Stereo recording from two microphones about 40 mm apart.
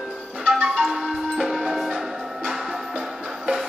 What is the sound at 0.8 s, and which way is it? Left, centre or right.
Music, centre.